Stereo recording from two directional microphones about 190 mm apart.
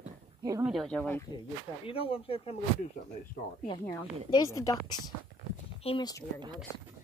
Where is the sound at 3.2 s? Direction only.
50° left (ahead or behind).